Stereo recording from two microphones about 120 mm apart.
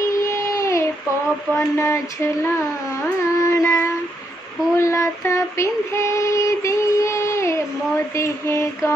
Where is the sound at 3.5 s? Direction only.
20° left (ahead or behind).